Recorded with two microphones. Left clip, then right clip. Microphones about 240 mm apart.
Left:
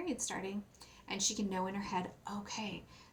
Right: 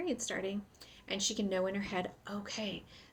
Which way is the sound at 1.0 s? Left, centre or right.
Left.